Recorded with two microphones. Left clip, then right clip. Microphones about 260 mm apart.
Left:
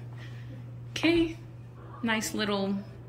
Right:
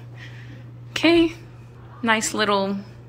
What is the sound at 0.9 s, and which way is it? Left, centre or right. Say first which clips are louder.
A woman's voice: right 8 dB; centre.